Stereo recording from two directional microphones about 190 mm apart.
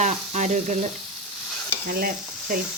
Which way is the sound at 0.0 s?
40° right (ahead or behind).